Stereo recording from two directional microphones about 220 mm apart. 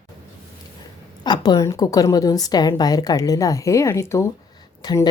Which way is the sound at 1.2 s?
20° left (ahead or behind).